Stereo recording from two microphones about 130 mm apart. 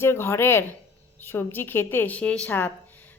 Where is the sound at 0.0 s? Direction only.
20° left (ahead or behind).